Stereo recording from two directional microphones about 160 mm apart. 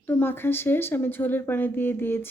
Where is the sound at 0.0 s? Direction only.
10° left (ahead or behind).